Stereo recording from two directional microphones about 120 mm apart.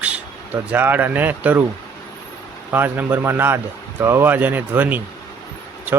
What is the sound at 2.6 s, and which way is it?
Speech, 15° right (ahead or behind).